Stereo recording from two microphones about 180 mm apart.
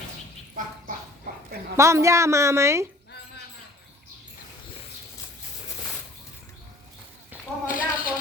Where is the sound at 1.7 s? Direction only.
15° right (ahead or behind).